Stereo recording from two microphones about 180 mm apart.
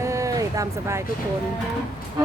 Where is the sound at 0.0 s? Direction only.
15° right (ahead or behind).